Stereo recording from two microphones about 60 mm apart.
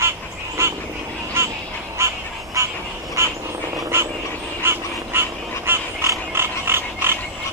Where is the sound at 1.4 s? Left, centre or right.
Right.